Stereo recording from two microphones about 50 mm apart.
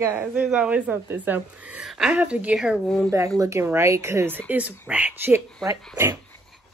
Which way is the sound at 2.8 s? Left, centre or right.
Centre.